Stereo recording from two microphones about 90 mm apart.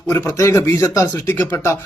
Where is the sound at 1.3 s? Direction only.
25° left (ahead or behind).